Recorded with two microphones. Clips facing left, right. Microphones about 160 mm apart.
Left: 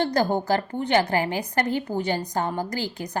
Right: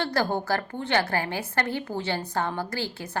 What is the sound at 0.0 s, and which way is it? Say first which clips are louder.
A woman's voice: left 4 dB; 20° left (ahead or behind).